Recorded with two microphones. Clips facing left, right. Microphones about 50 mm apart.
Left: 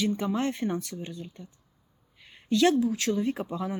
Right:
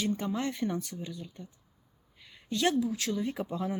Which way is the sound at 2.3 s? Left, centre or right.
Left.